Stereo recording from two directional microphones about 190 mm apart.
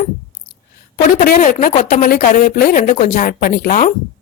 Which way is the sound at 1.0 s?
45° left (ahead or behind).